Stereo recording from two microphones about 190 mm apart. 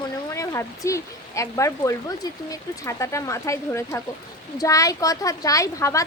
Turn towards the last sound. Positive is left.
turn(degrees=15)  # may be behind; listen again after turning